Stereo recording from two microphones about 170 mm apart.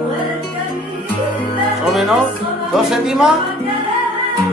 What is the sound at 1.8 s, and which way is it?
Music, centre (ahead or behind).